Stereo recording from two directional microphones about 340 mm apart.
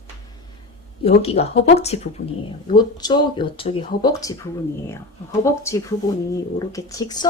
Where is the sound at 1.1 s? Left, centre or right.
Centre.